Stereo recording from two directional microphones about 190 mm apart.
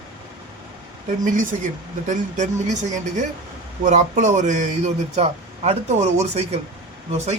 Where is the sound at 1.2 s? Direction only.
45° right (ahead or behind).